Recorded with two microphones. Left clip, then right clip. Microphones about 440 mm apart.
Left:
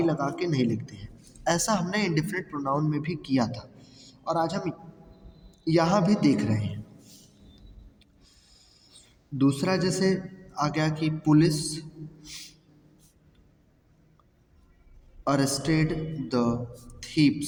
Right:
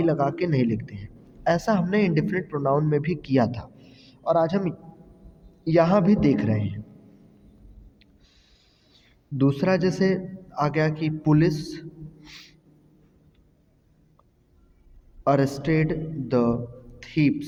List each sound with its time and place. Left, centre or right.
0.0 s a woman's voice: right
8.9 s a man's voice: right
15.2 s a man's voice: right